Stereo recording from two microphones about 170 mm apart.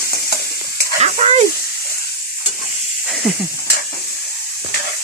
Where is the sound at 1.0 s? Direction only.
40° right (ahead or behind).